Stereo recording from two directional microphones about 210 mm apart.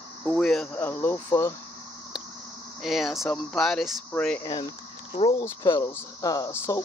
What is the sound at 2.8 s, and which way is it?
Speech, centre (ahead or behind).